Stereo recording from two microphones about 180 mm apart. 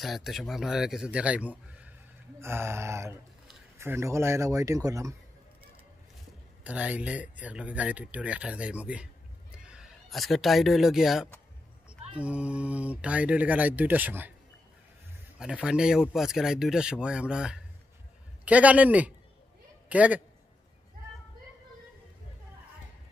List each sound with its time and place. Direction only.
0.0 s speech: centre (ahead or behind); by 5.1 s 20° right (ahead or behind)
6.6 s speech: 10° right (ahead or behind)
15.3 s speech: 5° right (ahead or behind)